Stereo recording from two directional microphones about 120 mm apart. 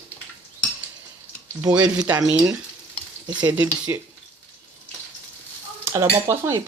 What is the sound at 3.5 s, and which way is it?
Speech, 15° right (ahead or behind).